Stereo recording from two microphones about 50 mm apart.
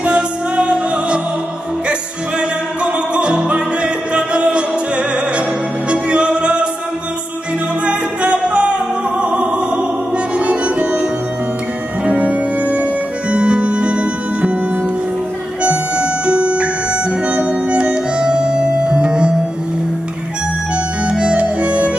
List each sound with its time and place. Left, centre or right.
0.0 s music: right
7.8 s music: right
15.6 s music: right
20.7 s music: centre